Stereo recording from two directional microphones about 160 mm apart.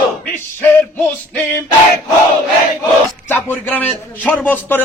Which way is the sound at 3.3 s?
10° left (ahead or behind).